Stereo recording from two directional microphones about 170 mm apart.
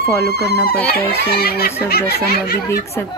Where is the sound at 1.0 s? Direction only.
70° left (ahead or behind).